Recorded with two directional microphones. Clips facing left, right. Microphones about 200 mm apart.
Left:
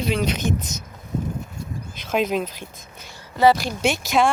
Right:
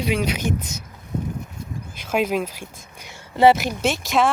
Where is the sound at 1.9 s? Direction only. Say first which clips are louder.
Even; 10° right (ahead or behind).